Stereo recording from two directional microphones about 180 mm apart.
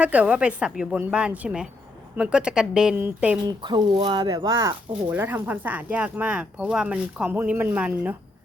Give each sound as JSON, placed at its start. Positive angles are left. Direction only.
{"t": 0.0, "sound": "a woman's voice", "side_deg": -10}
{"t": 3.4, "sound": "speech", "side_deg": -25}